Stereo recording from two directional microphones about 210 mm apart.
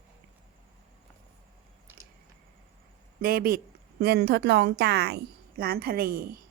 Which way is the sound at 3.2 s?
45° right (ahead or behind).